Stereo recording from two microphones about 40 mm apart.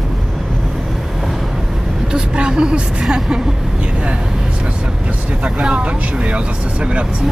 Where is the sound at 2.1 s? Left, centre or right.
Right.